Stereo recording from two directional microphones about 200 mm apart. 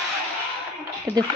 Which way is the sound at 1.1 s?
10° left (ahead or behind).